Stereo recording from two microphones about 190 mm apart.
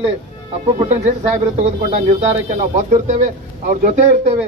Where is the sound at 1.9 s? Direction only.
40° right (ahead or behind).